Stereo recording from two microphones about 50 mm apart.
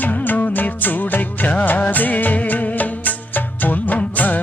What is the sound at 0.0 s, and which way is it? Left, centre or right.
Music, left.